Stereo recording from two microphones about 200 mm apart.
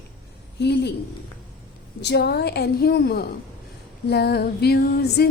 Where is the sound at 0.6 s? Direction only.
60° left (ahead or behind).